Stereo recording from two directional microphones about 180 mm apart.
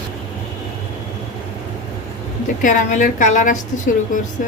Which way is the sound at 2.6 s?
45° left (ahead or behind).